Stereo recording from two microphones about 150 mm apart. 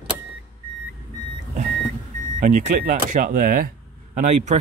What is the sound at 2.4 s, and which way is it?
Speech, 55° right (ahead or behind).